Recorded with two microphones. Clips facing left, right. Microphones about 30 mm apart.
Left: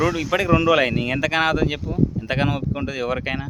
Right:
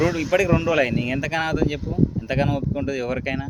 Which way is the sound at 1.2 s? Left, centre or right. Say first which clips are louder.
Left 5 dB; left.